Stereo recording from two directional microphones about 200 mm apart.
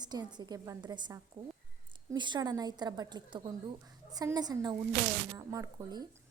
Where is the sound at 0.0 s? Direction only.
20° right (ahead or behind).